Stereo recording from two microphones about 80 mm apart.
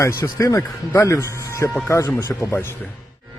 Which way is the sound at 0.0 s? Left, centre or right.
Left.